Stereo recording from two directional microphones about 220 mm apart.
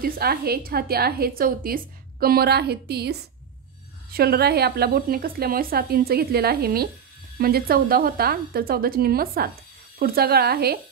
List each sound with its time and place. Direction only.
0.0 s a woman's voice: 45° right (ahead or behind)